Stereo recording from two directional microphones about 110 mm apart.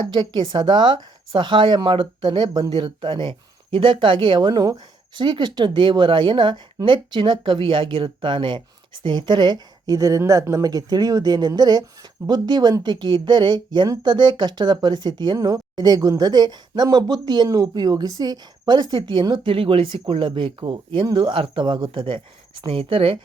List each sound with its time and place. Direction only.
0.1 s speech: 40° right (ahead or behind)
22.6 s speech: 60° right (ahead or behind)